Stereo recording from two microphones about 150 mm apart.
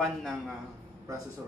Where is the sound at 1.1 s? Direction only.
25° right (ahead or behind).